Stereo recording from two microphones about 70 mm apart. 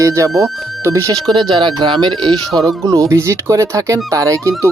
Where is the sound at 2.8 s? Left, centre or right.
Right.